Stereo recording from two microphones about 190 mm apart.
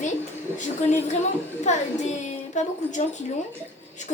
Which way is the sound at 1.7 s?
35° left (ahead or behind).